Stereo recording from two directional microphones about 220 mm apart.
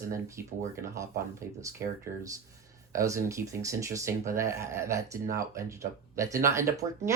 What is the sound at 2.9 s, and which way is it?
Speech, 15° right (ahead or behind).